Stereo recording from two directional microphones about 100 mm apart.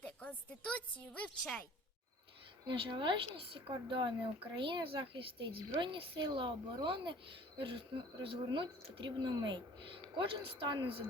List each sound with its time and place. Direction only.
0.0 s a woman's voice: 15° left (ahead or behind)
2.6 s speech: 55° right (ahead or behind)